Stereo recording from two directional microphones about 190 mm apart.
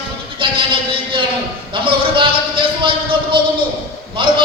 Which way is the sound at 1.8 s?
25° right (ahead or behind).